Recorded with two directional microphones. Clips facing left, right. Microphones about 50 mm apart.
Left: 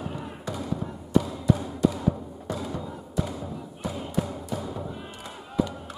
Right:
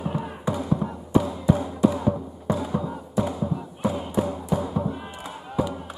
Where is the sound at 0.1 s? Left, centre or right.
Centre.